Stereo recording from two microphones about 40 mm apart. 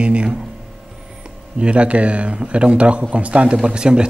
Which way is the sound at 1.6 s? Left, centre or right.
Right.